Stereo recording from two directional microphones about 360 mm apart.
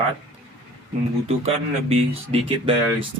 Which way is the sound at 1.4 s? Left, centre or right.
Centre.